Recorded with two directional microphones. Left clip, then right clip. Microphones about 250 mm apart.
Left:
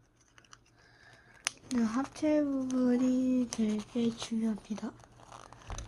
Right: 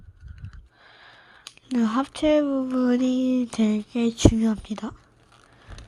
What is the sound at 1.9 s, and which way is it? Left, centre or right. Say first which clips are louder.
Speech: right 10 dB; right.